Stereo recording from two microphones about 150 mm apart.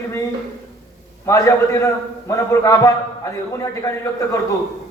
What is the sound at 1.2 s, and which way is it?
A man's voice, 20° left (ahead or behind).